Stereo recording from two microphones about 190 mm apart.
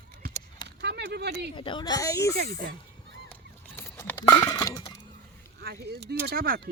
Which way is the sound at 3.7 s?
10° left (ahead or behind).